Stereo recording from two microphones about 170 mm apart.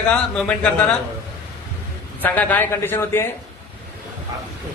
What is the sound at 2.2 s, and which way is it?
A man's voice, 10° left (ahead or behind).